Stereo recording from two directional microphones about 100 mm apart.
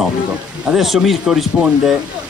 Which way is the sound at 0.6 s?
5° right (ahead or behind).